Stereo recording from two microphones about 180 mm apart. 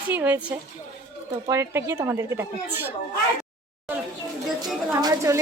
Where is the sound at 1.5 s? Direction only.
15° right (ahead or behind).